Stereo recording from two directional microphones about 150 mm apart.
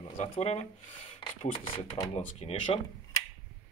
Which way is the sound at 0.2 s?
45° left (ahead or behind).